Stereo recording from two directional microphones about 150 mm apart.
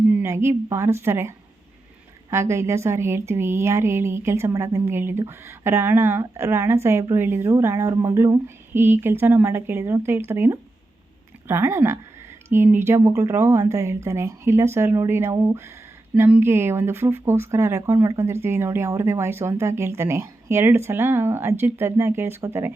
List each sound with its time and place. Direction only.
0.1 s speech: 15° right (ahead or behind)